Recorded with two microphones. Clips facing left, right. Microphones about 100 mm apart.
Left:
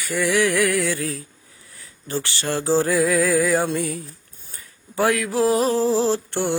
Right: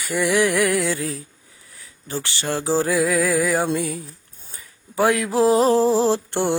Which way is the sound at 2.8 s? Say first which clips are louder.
Left 1 dB; 5° right (ahead or behind).